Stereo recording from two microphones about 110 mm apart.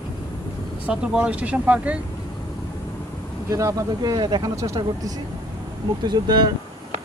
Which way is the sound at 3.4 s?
30° right (ahead or behind).